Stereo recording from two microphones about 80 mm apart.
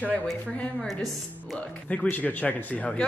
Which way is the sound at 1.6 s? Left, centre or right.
Centre.